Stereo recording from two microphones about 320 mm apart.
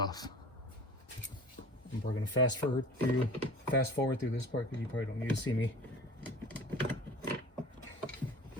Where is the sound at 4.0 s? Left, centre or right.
Left.